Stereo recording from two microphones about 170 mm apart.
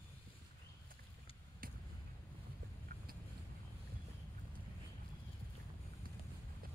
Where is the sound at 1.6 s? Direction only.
55° right (ahead or behind).